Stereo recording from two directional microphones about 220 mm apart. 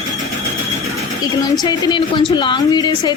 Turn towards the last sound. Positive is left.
turn(degrees=20)  # may be behind; listen again after turning